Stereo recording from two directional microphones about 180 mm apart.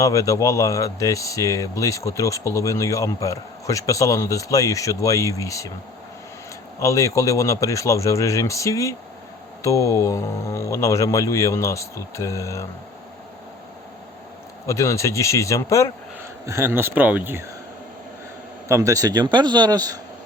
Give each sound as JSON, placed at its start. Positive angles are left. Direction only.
{"t": 0.0, "sound": "speech", "side_deg": 20}
{"t": 6.7, "sound": "speech", "side_deg": 15}
{"t": 14.7, "sound": "speech", "side_deg": 15}
{"t": 16.5, "sound": "speech", "side_deg": -15}
{"t": 18.7, "sound": "speech", "side_deg": -15}